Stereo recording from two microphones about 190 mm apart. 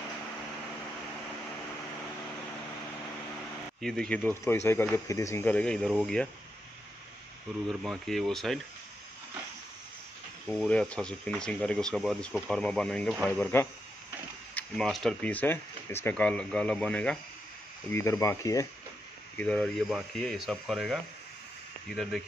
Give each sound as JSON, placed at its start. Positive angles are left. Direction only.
{"t": 3.8, "sound": "speech", "side_deg": 5}
{"t": 7.6, "sound": "speech", "side_deg": 0}
{"t": 10.4, "sound": "speech", "side_deg": 5}
{"t": 19.3, "sound": "speech", "side_deg": 5}